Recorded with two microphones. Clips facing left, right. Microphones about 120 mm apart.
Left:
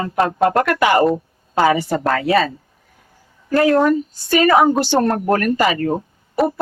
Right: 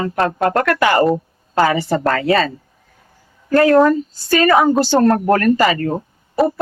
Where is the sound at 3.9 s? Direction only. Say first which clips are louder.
Even; 15° left (ahead or behind).